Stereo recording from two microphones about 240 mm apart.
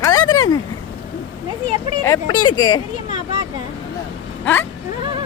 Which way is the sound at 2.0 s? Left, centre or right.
Centre.